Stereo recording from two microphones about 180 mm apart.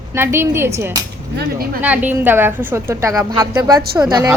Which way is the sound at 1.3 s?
60° right (ahead or behind).